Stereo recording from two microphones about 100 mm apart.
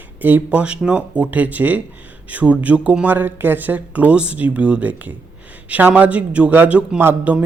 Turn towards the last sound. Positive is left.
turn(degrees=-20)  # may be behind; listen again after turning